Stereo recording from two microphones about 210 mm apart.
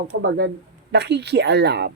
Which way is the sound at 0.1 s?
50° right (ahead or behind).